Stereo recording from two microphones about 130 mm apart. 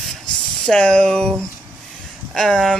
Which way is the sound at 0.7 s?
5° left (ahead or behind).